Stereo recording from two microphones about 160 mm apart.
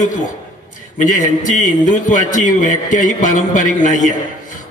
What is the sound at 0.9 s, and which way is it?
A man's voice, 50° left (ahead or behind).